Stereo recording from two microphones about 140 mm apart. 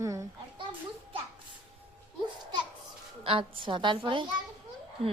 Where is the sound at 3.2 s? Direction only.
40° right (ahead or behind).